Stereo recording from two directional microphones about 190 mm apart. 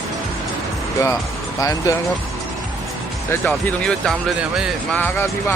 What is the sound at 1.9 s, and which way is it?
Speech, 20° left (ahead or behind).